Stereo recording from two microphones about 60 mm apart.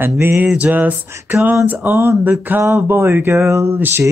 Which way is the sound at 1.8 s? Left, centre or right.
Right.